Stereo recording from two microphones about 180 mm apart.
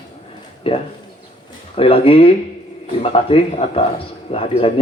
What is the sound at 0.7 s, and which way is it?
A man's voice, 30° left (ahead or behind).